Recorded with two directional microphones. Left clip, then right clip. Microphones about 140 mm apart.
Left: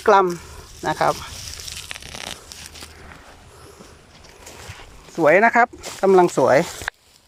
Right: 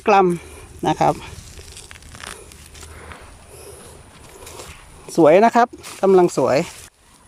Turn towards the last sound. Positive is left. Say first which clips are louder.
# left 1 dB
turn(degrees=-10)  # may be behind; listen again after turning